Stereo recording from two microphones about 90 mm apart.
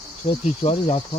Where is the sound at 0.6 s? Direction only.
70° left (ahead or behind).